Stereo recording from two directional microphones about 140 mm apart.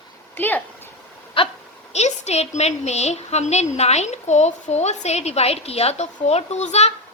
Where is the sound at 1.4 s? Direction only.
40° left (ahead or behind).